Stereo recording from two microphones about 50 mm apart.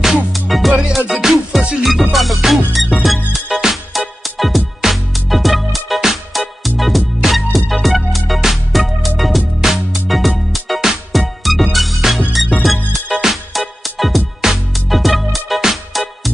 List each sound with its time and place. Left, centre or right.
0.0 s music: centre